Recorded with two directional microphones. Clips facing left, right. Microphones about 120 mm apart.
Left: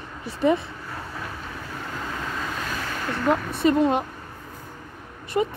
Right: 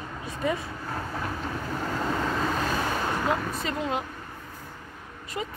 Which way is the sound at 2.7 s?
25° right (ahead or behind).